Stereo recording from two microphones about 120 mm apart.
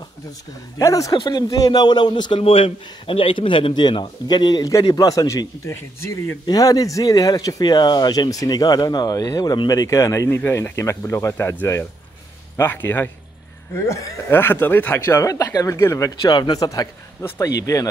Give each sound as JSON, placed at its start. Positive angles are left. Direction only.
{"t": 0.7, "sound": "speech", "side_deg": 30}
{"t": 6.4, "sound": "speech", "side_deg": 30}
{"t": 16.2, "sound": "speech", "side_deg": 40}